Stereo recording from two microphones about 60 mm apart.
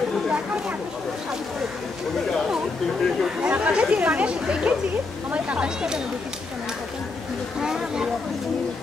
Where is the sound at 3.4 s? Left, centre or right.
Right.